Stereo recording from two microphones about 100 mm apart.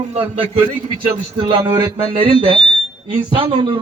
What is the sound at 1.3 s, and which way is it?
A man's voice, 55° right (ahead or behind).